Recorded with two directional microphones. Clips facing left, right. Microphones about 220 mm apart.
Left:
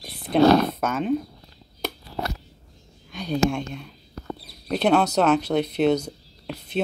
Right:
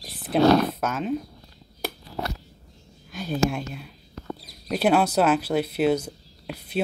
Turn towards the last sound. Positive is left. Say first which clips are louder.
# left 1 dB
turn(degrees=-5)  # may be behind; listen again after turning